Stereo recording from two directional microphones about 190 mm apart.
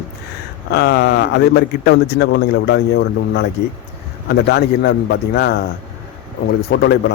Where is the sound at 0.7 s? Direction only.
60° left (ahead or behind).